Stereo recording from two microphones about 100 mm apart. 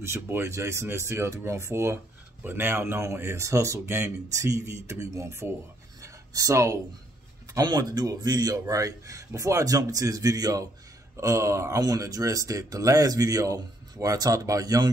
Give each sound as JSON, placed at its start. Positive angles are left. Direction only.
{"t": 0.0, "sound": "speech", "side_deg": -25}
{"t": 5.9, "sound": "a sound", "side_deg": -35}
{"t": 7.5, "sound": "a man's voice", "side_deg": -40}